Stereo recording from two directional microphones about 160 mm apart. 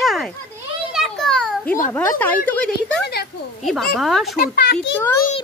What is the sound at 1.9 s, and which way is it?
Speech, 10° left (ahead or behind).